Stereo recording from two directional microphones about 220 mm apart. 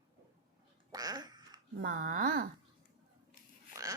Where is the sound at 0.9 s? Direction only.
15° right (ahead or behind).